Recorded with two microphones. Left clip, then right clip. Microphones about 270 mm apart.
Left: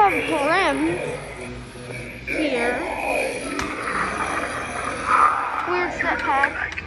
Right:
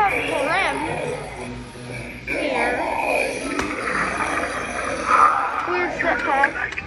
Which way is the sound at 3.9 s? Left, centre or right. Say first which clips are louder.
Right 1 dB; centre.